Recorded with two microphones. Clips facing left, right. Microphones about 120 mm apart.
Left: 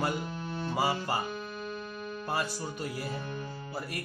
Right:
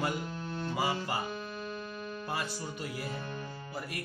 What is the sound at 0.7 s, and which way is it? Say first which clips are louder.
Speech: left 3 dB; 35° left (ahead or behind).